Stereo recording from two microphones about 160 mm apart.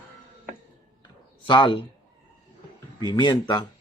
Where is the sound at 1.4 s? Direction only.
30° left (ahead or behind).